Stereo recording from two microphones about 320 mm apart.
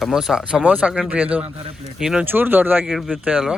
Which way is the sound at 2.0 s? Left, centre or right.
Centre.